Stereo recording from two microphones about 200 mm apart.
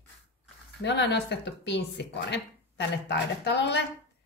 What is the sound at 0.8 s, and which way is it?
Speech, 60° left (ahead or behind).